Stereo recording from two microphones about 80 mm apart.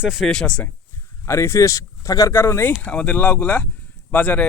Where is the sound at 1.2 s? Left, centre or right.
Left.